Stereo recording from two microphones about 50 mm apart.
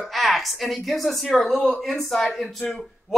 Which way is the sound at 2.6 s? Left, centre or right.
Left.